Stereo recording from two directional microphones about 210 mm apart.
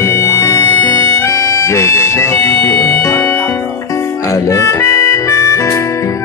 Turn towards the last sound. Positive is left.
turn(degrees=15)  # may be behind; listen again after turning